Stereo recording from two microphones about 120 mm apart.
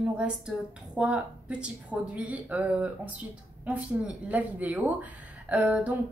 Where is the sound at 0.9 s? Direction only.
10° right (ahead or behind).